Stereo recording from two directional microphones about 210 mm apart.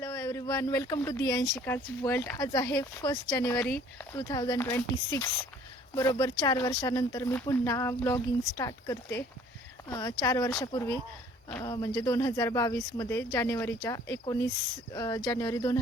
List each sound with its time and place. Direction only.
0.0 s speech: 15° left (ahead or behind)